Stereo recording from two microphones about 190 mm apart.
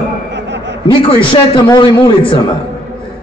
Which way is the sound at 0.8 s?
25° left (ahead or behind).